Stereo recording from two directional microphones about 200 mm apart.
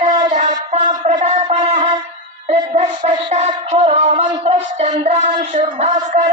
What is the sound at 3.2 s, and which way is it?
Music, 35° right (ahead or behind).